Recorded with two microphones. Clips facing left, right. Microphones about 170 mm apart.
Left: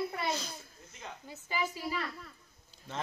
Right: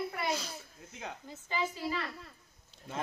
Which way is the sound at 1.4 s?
10° left (ahead or behind).